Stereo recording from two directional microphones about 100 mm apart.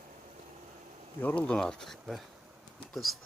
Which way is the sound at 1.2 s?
15° left (ahead or behind).